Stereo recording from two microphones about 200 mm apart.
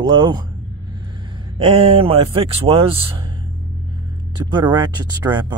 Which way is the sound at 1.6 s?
30° right (ahead or behind).